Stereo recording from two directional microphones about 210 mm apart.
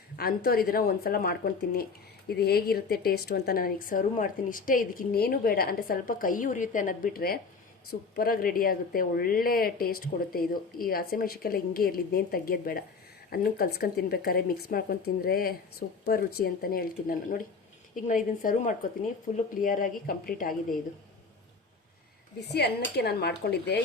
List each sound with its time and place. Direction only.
0.2 s a woman's voice: 45° left (ahead or behind)
22.4 s a woman's voice: 50° left (ahead or behind)